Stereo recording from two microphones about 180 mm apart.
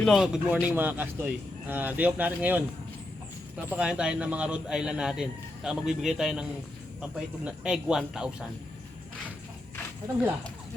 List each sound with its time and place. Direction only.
0.0 s speech: centre (ahead or behind)
3.7 s speech: 5° right (ahead or behind)